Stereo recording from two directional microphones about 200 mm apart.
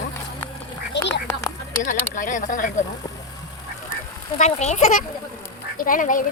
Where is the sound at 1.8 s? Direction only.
40° left (ahead or behind).